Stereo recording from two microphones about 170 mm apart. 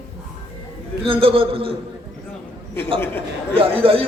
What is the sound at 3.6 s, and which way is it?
Speech, 35° right (ahead or behind).